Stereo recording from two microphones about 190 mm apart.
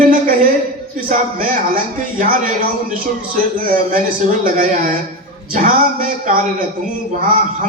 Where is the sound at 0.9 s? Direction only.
45° right (ahead or behind).